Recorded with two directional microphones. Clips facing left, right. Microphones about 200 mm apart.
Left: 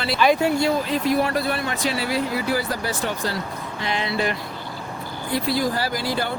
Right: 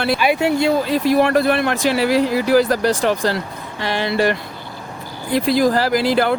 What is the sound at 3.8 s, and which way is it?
Speech, 70° right (ahead or behind).